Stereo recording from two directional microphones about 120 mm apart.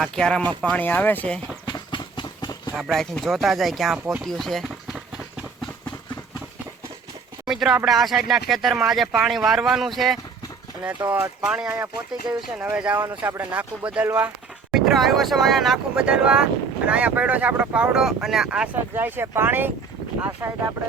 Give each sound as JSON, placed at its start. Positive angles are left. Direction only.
{"t": 0.0, "sound": "speech", "side_deg": 5}
{"t": 1.6, "sound": "a sound", "side_deg": 40}
{"t": 2.7, "sound": "speech", "side_deg": -5}
{"t": 3.9, "sound": "speech", "side_deg": -10}
{"t": 4.2, "sound": "run", "side_deg": 5}
{"t": 7.4, "sound": "a sound", "side_deg": -5}
{"t": 7.9, "sound": "speech", "side_deg": 0}
{"t": 11.1, "sound": "speech", "side_deg": -10}